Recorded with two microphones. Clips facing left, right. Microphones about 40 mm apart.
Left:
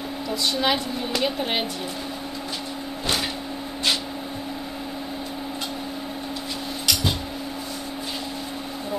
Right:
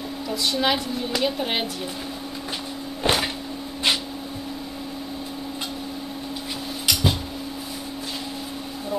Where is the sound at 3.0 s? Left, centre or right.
Centre.